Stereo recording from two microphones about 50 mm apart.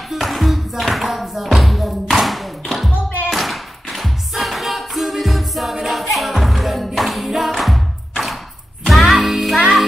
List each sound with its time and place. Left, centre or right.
0.1 s music: centre
3.3 s tap: centre
7.2 s music: centre